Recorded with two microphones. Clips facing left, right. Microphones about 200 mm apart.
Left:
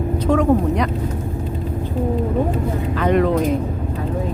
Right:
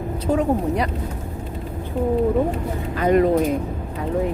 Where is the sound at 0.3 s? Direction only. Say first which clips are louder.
Left 3 dB; 35° right (ahead or behind).